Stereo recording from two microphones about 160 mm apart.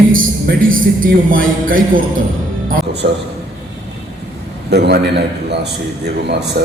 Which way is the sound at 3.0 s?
70° right (ahead or behind).